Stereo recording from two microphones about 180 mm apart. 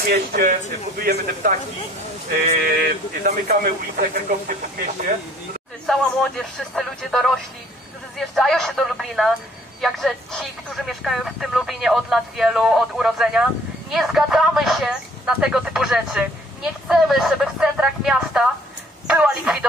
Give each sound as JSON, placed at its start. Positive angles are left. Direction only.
{"t": 0.1, "sound": "speech", "side_deg": -60}
{"t": 5.9, "sound": "speech", "side_deg": 0}